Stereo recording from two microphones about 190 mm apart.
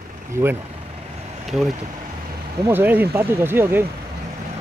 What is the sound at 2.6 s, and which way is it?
Speech, 10° right (ahead or behind).